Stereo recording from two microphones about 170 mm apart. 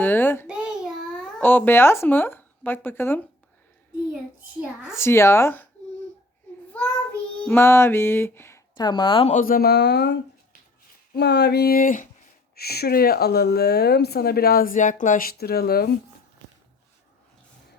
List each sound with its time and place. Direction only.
0.0 s a sound: 10° left (ahead or behind)
0.4 s babbling: 5° right (ahead or behind); by 3.2 s 15° left (ahead or behind)
4.6 s speech: 5° right (ahead or behind)
4.9 s music: 15° left (ahead or behind)
7.4 s music: 15° left (ahead or behind)
8.7 s speech: 25° left (ahead or behind)
9.3 s speech: 55° left (ahead or behind); by 10.2 s 80° left
11.2 s speech: 80° left; by 12.0 s 55° left (ahead or behind)
12.5 s speech: 65° left (ahead or behind)